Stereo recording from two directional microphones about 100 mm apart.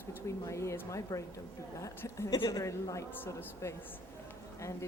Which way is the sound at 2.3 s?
45° left (ahead or behind).